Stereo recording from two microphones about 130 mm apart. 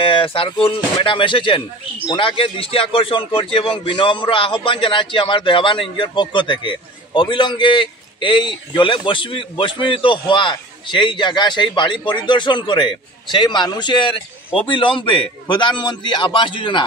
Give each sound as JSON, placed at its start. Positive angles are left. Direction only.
{"t": 0.0, "sound": "a man's voice", "side_deg": 45}